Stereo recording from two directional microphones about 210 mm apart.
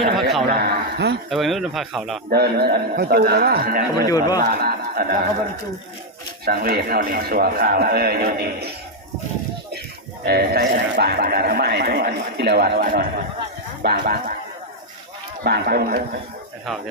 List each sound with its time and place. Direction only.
0.6 s a sound: 50° right (ahead or behind)
1.3 s speech: centre (ahead or behind)
2.3 s speech: 50° right (ahead or behind)
6.4 s speech: 45° right (ahead or behind)
10.2 s speech: 50° right (ahead or behind)
15.4 s speech: 50° right (ahead or behind)
16.6 s speech: centre (ahead or behind)